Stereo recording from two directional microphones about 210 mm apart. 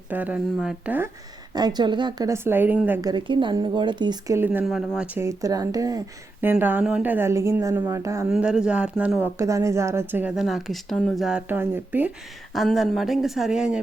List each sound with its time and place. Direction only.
0.1 s a woman's voice: 5° right (ahead or behind)
1.5 s a woman's voice: 20° right (ahead or behind); by 13.7 s 5° right (ahead or behind)